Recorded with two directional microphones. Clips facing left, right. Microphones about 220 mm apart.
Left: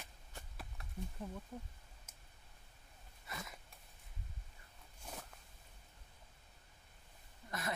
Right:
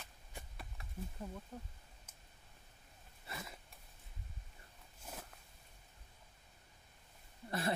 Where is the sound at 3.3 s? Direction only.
30° right (ahead or behind).